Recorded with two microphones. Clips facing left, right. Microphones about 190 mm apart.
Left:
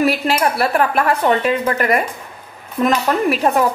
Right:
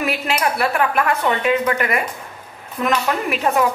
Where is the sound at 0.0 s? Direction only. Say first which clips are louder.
Left 5 dB; 35° left (ahead or behind).